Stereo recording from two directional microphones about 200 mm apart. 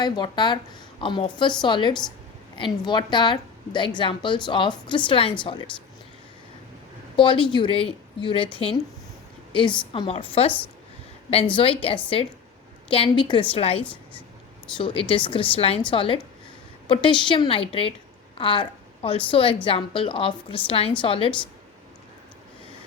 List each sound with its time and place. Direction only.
0.0 s a woman's voice: 20° left (ahead or behind)
7.2 s a woman's voice: 25° left (ahead or behind)
11.5 s a woman's voice: 25° left (ahead or behind)
13.8 s a woman's voice: 5° left (ahead or behind)
14.8 s a woman's voice: 25° left (ahead or behind)